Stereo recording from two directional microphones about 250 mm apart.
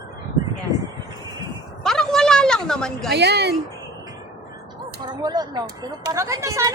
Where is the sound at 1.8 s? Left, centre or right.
Centre.